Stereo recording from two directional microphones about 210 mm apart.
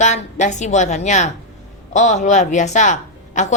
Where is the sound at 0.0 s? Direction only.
35° left (ahead or behind).